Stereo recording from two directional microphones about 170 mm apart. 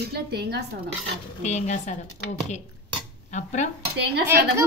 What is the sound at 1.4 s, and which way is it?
Speech, 40° left (ahead or behind).